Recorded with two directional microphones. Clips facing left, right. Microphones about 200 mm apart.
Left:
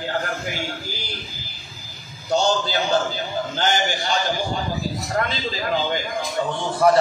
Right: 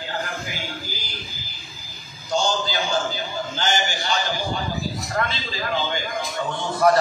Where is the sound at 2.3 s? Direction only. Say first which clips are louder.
Left 3 dB; 65° left (ahead or behind).